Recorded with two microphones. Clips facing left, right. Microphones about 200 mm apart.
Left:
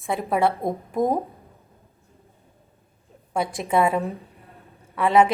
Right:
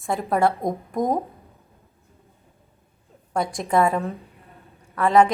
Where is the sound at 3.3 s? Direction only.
Centre (ahead or behind).